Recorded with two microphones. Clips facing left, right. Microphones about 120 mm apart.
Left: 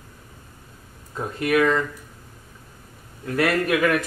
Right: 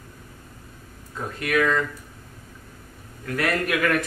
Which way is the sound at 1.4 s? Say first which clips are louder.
Left 3 dB; 25° left (ahead or behind).